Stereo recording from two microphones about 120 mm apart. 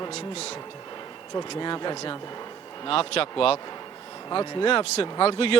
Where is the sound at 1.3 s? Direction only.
40° left (ahead or behind).